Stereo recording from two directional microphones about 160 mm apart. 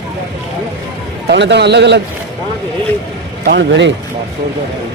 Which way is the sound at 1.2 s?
90° right.